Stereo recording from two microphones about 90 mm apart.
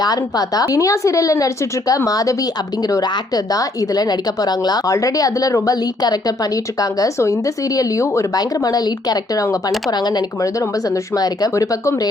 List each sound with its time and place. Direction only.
0.0 s speech: 45° left (ahead or behind)
10.6 s speech: 40° left (ahead or behind)